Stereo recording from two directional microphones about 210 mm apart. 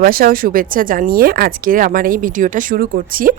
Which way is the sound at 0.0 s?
45° right (ahead or behind).